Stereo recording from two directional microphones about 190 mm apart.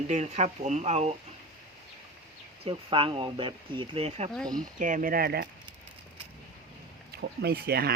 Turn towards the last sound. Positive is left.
turn(degrees=-55)  # may be behind; listen again after turning